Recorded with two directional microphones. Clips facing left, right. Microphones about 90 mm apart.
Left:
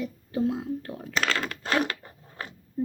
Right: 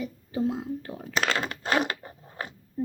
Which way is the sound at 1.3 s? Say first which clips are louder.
Right 1 dB; 20° right (ahead or behind).